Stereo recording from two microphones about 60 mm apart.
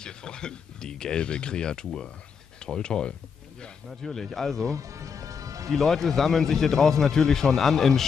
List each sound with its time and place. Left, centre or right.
0.0 s speech: centre
4.6 s music: right
5.7 s speech: centre